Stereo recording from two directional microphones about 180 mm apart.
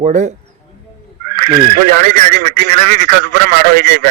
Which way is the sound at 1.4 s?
55° right (ahead or behind).